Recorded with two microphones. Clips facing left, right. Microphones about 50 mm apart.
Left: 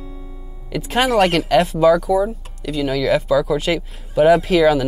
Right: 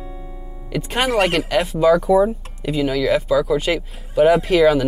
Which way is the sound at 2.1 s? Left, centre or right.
Right.